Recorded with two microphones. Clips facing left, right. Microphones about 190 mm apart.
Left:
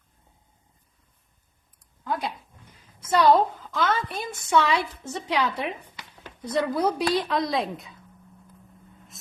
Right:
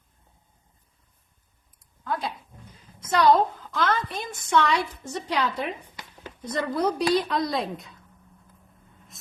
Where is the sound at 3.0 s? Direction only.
5° left (ahead or behind).